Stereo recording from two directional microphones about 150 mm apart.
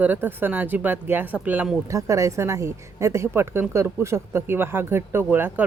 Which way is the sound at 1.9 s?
20° right (ahead or behind).